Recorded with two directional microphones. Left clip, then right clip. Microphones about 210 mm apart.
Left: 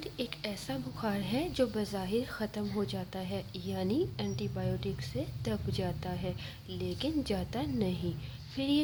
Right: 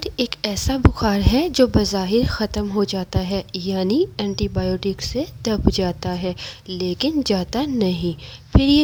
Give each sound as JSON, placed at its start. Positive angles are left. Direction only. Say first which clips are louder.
{"t": 0.0, "sound": "a woman's voice", "louder": "right 14 dB", "side_deg": -45}